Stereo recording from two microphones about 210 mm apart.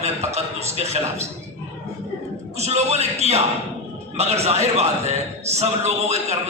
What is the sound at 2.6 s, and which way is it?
Speech, 30° right (ahead or behind).